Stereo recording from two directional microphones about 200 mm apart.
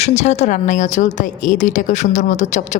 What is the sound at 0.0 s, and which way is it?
A woman's voice, 35° left (ahead or behind).